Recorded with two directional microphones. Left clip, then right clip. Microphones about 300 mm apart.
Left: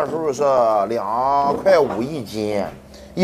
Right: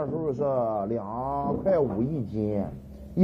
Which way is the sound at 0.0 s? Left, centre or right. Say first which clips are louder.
Left 9 dB; centre.